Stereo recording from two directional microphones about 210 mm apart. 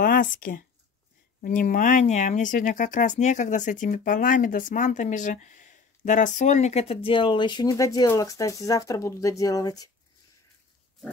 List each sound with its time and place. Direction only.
0.0 s speech: 40° left (ahead or behind); by 9.8 s 15° left (ahead or behind)